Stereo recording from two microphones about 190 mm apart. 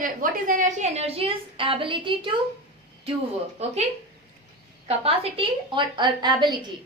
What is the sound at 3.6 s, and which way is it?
Speech, 35° right (ahead or behind).